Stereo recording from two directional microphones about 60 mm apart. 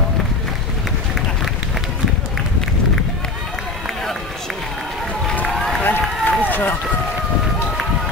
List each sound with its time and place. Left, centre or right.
5.5 s run: centre
5.8 s run: left